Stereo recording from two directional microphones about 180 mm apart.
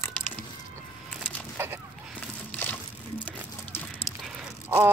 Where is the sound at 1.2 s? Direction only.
10° right (ahead or behind).